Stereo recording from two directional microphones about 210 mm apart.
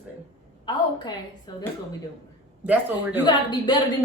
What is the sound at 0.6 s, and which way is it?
Speech, 20° left (ahead or behind).